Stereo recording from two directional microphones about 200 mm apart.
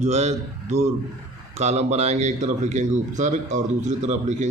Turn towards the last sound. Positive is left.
turn(degrees=-35)  # may be behind; listen again after turning